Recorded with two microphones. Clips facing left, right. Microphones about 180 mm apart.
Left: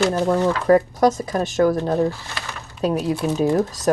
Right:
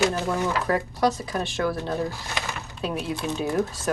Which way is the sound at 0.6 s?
45° left (ahead or behind).